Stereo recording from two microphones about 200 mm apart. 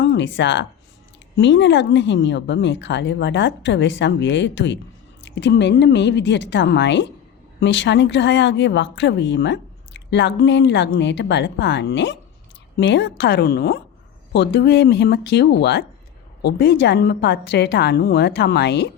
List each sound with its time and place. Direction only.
0.0 s a woman's voice: 65° left (ahead or behind)